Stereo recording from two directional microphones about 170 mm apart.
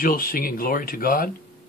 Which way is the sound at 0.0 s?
60° left (ahead or behind).